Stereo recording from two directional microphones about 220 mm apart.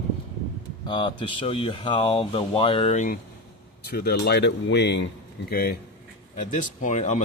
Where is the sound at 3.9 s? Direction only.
45° left (ahead or behind).